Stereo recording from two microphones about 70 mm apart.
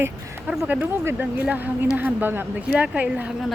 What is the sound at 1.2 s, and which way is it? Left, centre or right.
Speech, right.